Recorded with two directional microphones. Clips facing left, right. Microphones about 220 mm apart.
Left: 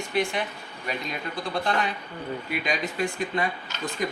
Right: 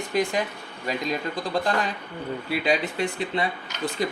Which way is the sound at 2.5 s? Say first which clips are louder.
Right 6 dB; 30° right (ahead or behind).